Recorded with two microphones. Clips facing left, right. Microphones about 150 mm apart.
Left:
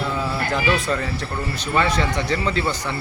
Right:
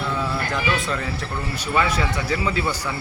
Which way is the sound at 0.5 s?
Centre (ahead or behind).